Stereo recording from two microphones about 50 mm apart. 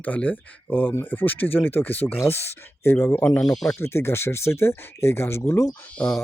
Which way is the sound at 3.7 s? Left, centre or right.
Left.